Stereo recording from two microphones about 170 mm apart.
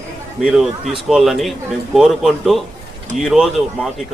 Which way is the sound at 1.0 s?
Centre (ahead or behind).